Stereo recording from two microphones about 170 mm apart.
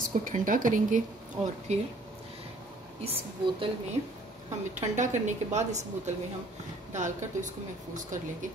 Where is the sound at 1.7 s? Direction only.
40° right (ahead or behind).